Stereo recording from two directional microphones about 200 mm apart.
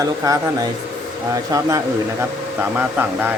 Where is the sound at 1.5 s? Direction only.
15° right (ahead or behind).